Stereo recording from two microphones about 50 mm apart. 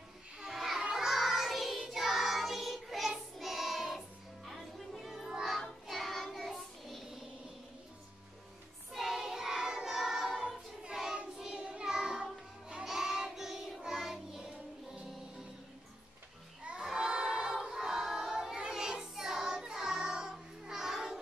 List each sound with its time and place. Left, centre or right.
0.4 s children playing: centre
0.9 s child singing: centre
4.5 s music: centre
5.9 s child singing: centre
8.9 s choir: centre
10.8 s child singing: centre
12.2 s music: centre
12.8 s child singing: centre
16.6 s a sound: centre